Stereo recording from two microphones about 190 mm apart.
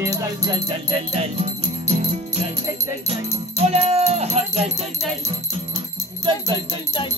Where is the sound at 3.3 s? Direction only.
30° right (ahead or behind).